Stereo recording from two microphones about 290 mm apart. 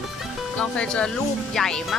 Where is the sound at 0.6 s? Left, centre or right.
Centre.